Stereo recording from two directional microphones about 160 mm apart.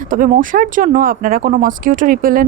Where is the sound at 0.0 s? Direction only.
55° right (ahead or behind).